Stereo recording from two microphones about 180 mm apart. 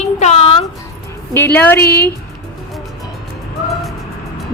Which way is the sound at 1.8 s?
60° left (ahead or behind).